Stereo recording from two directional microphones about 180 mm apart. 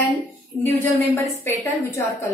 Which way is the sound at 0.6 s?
10° left (ahead or behind).